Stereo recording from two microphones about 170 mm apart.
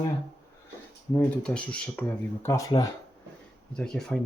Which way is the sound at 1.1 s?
5° left (ahead or behind).